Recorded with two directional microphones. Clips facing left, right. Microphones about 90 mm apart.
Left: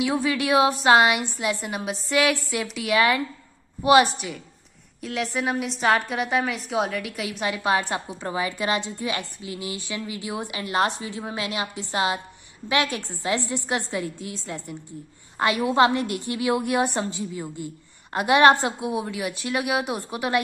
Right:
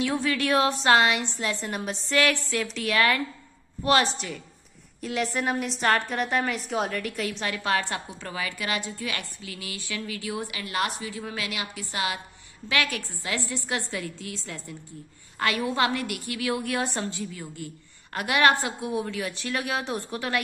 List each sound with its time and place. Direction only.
0.0 s a woman's voice: 10° left (ahead or behind)
5.0 s a woman's voice: centre (ahead or behind); by 20.3 s 15° left (ahead or behind)